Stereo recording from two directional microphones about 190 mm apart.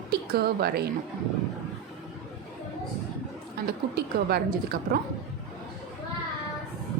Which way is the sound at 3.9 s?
55° right (ahead or behind).